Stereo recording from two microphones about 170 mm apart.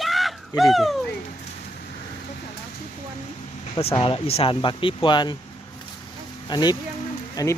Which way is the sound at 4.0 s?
35° left (ahead or behind).